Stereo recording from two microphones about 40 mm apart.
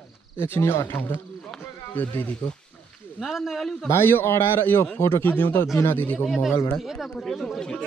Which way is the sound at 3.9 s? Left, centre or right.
Left.